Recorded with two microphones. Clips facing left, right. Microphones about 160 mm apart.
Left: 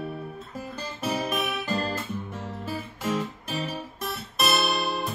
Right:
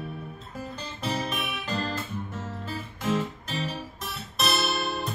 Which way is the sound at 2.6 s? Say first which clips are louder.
Left 2 dB; 5° left (ahead or behind).